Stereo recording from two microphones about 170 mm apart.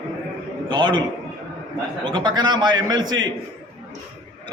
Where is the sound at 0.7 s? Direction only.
25° right (ahead or behind).